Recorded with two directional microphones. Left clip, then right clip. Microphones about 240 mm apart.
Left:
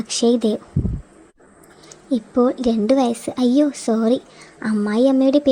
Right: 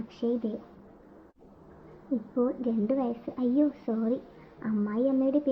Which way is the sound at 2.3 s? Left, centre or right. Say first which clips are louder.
Left 12 dB; left.